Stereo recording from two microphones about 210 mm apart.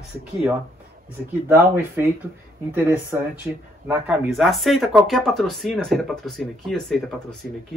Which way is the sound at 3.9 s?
Centre (ahead or behind).